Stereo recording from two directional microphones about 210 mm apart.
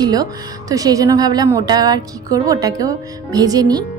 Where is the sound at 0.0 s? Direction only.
20° right (ahead or behind).